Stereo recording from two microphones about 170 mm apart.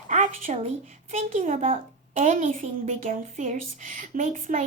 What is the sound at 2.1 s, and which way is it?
Speech, 50° right (ahead or behind).